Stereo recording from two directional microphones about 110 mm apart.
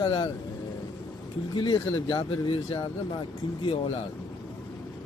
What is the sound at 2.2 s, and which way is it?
Speech, 55° left (ahead or behind).